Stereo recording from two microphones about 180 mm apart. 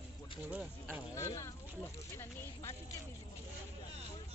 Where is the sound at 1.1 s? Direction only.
15° left (ahead or behind).